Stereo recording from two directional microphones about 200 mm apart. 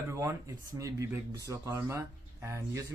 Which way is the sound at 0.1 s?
15° right (ahead or behind).